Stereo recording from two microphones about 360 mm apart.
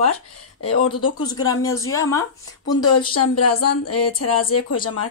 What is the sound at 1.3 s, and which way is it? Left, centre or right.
Speech, centre.